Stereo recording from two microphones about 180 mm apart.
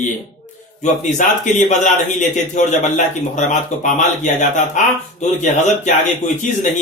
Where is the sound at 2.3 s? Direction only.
45° left (ahead or behind).